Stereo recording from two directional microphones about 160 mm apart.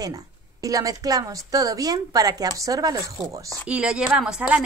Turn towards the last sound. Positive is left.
turn(degrees=-5)  # may be behind; listen again after turning